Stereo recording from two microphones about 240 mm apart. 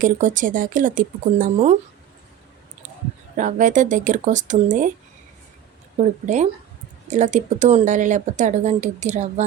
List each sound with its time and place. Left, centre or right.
0.0 s speech: right
3.3 s speech: right
6.0 s speech: right